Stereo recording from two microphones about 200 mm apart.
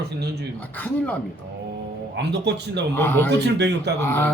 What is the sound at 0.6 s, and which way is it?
Speech, 10° left (ahead or behind).